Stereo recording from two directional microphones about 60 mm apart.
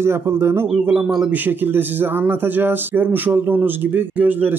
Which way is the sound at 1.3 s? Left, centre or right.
Right.